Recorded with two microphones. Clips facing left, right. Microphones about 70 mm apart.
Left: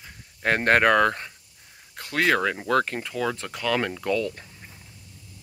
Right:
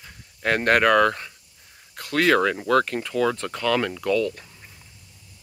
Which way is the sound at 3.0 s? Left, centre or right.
Centre.